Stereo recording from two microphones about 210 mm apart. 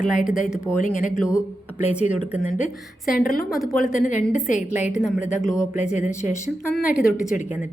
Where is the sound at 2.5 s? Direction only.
40° left (ahead or behind).